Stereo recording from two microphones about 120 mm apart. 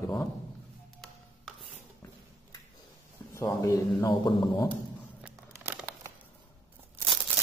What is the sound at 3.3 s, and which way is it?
A man's voice, 25° left (ahead or behind).